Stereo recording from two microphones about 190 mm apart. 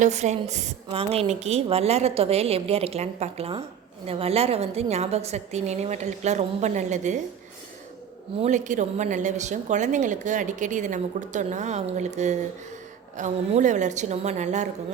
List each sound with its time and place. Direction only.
0.0 s a woman's voice: 35° right (ahead or behind)
8.4 s a woman's voice: 40° right (ahead or behind)